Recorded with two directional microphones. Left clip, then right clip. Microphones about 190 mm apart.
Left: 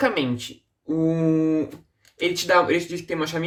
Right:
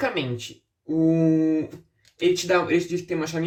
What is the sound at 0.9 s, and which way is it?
Mantra, 40° left (ahead or behind).